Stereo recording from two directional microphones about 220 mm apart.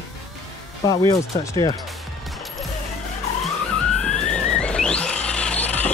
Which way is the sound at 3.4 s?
5° left (ahead or behind).